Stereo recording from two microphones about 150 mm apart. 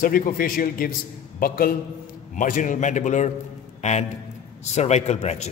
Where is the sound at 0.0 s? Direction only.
70° left (ahead or behind).